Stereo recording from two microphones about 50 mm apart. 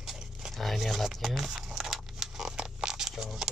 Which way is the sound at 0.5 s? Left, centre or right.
Centre.